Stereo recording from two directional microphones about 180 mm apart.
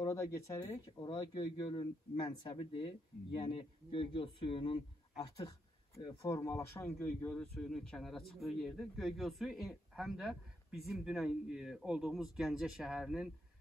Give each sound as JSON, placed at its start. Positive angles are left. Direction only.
{"t": 0.0, "sound": "speech", "side_deg": 15}